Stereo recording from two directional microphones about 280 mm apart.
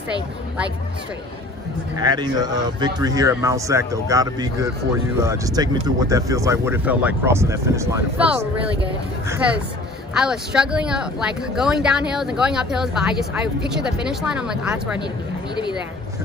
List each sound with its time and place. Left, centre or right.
2.0 s speech: centre
10.1 s speech: centre